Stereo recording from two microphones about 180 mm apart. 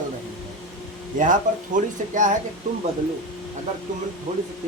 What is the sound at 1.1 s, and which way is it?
Speech, 45° right (ahead or behind).